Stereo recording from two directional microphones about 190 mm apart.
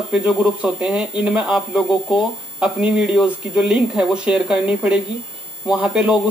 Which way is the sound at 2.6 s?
5° right (ahead or behind).